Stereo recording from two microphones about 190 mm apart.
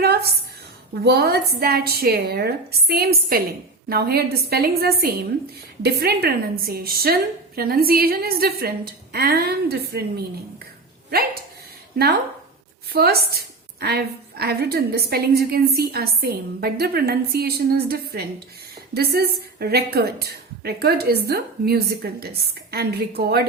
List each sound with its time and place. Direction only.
0.0 s a sound: 55° right (ahead or behind)
1.0 s a woman's voice: 60° right (ahead or behind)
11.9 s a woman's voice: 55° right (ahead or behind)